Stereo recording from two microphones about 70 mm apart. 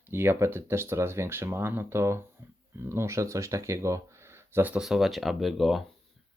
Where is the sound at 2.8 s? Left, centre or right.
Right.